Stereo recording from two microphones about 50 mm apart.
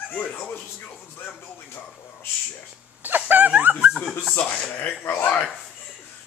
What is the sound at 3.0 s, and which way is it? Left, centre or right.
Dog, right.